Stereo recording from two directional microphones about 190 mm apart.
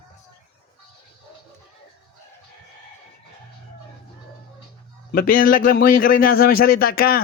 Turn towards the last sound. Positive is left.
turn(degrees=50)  # may be behind; listen again after turning